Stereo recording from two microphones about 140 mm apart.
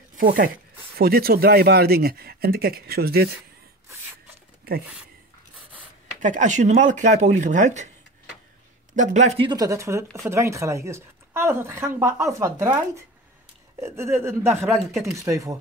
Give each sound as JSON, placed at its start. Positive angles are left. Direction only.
{"t": 0.1, "sound": "speech", "side_deg": -80}
{"t": 6.1, "sound": "speech", "side_deg": -65}
{"t": 8.9, "sound": "speech", "side_deg": -60}
{"t": 9.4, "sound": "a woman's voice", "side_deg": -30}
{"t": 13.7, "sound": "a woman's voice", "side_deg": -20}
{"t": 14.6, "sound": "speech", "side_deg": 0}
{"t": 15.1, "sound": "a woman's voice", "side_deg": -20}